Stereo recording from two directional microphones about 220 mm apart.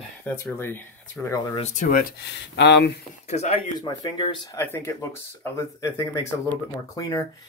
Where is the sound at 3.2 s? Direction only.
30° left (ahead or behind).